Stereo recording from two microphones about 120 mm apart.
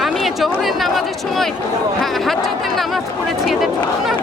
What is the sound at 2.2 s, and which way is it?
Chatter, centre (ahead or behind).